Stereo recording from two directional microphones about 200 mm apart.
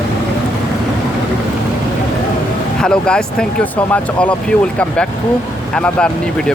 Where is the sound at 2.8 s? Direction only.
5° left (ahead or behind).